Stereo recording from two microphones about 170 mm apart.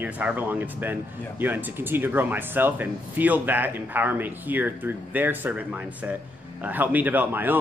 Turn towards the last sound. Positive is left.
turn(degrees=-10)  # may be behind; listen again after turning